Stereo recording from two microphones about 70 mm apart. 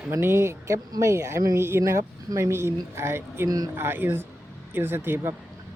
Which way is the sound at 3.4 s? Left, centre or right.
Right.